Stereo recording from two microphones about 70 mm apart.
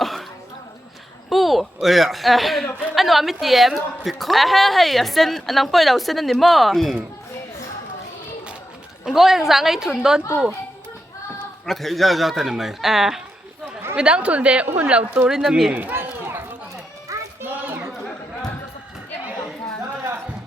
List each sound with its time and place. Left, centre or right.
0.0 s throat clearing: centre
1.3 s a woman's voice: centre
9.0 s a woman's voice: centre
11.6 s a woman's voice: centre
15.3 s a woman's voice: centre
15.7 s run: right
17.1 s children playing: right
17.4 s a sound: right